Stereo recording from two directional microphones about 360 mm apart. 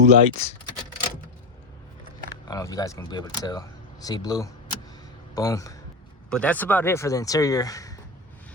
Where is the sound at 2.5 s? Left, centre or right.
Centre.